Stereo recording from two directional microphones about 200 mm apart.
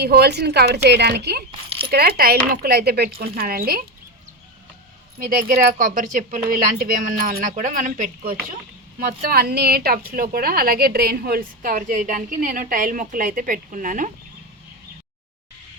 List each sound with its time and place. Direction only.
0.0 s a woman's voice: 55° right (ahead or behind)
1.5 s a sound: 25° right (ahead or behind)
1.9 s a woman's voice: 50° right (ahead or behind)
5.2 s a woman's voice: 45° right (ahead or behind)